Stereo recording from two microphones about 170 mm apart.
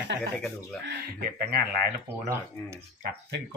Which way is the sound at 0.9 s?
60° right (ahead or behind).